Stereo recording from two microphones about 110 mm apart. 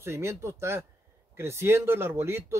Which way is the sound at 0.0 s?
25° right (ahead or behind).